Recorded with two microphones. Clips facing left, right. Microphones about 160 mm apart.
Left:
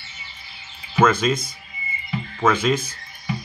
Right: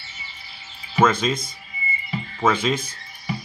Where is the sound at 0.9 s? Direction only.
5° left (ahead or behind).